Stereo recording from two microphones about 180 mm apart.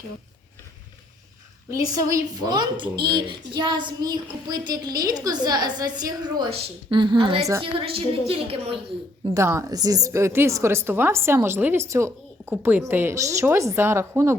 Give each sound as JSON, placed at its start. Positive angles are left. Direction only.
{"t": 1.7, "sound": "a woman's voice", "side_deg": -20}
{"t": 9.3, "sound": "a woman's voice", "side_deg": -15}